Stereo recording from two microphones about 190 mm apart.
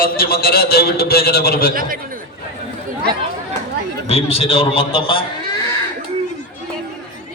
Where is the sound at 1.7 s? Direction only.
50° right (ahead or behind).